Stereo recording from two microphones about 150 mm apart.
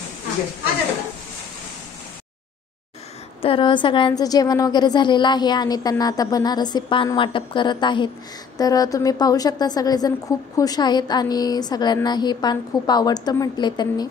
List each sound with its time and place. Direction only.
3.4 s a woman's voice: 35° left (ahead or behind)